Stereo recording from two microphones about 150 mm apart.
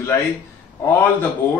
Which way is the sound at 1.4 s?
15° left (ahead or behind).